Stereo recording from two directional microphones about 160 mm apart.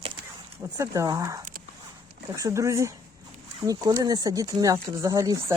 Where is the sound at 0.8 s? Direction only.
20° right (ahead or behind).